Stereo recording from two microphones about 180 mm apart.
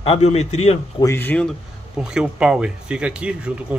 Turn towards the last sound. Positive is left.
turn(degrees=-5)  # may be behind; listen again after turning